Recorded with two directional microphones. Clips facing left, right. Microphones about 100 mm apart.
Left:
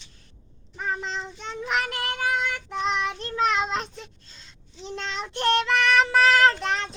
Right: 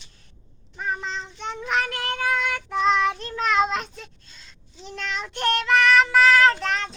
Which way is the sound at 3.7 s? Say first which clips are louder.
Right 1 dB; 30° left (ahead or behind).